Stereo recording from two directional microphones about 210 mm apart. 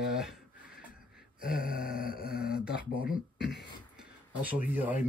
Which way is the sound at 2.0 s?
45° left (ahead or behind).